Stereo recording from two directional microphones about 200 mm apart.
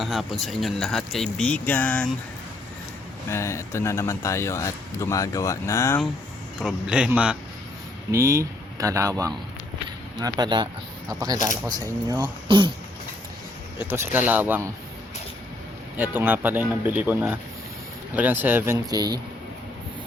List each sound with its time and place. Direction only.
0.0 s speech: centre (ahead or behind)
3.2 s speech: 15° left (ahead or behind)
6.6 s speech: 5° right (ahead or behind); by 12.7 s 25° right (ahead or behind)
13.7 s speech: 10° right (ahead or behind)
16.0 s speech: 10° right (ahead or behind)